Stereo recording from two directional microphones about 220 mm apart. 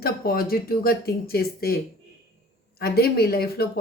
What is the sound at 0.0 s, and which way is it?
Speech, 45° left (ahead or behind).